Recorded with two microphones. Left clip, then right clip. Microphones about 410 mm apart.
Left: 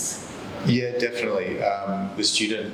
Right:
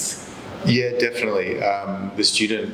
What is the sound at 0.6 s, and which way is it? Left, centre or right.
A man's voice, right.